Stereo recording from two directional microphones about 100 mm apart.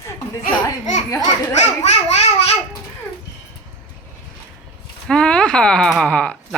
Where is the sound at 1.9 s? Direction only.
90° left.